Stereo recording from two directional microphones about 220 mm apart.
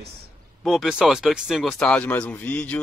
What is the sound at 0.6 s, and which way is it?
Speech, centre (ahead or behind).